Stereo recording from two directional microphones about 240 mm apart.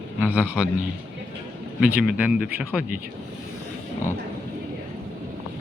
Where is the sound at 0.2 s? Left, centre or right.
Centre.